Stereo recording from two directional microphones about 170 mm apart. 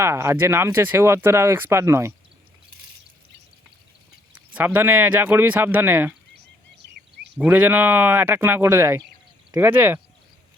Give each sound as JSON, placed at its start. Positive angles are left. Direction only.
{"t": 0.0, "sound": "speech", "side_deg": -15}
{"t": 4.4, "sound": "speech", "side_deg": -10}
{"t": 6.3, "sound": "a sound", "side_deg": -80}
{"t": 7.3, "sound": "speech", "side_deg": -10}